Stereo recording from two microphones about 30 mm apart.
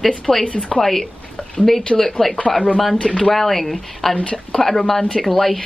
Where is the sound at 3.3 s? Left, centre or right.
Centre.